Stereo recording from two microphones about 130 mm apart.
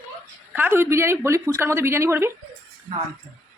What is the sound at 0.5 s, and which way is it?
Speech, 15° right (ahead or behind).